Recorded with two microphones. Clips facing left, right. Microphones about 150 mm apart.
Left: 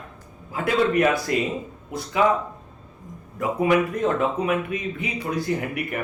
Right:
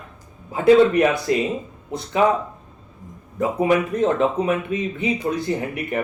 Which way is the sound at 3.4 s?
25° right (ahead or behind).